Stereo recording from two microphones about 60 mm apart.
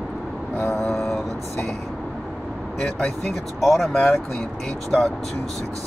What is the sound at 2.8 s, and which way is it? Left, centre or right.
Speech, centre.